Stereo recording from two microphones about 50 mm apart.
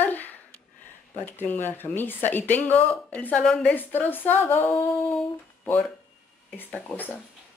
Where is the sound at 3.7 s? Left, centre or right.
Left.